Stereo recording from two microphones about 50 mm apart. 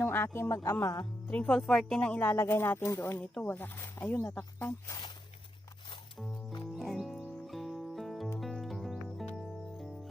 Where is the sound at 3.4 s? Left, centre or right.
Left.